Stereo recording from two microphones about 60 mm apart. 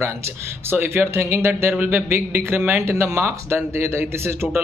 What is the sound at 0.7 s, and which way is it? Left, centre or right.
Speech, right.